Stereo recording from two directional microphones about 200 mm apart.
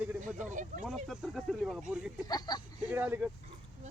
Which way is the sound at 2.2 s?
20° left (ahead or behind).